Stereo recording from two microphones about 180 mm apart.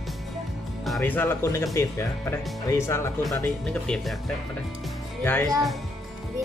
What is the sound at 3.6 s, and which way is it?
Speech, 5° left (ahead or behind).